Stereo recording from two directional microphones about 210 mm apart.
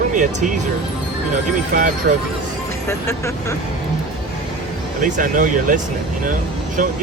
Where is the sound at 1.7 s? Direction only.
40° right (ahead or behind).